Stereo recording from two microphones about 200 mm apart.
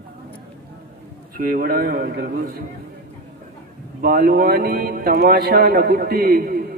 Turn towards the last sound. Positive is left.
turn(degrees=-50)  # may be behind; listen again after turning